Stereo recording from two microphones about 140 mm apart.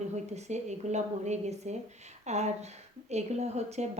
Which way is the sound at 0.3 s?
55° right (ahead or behind).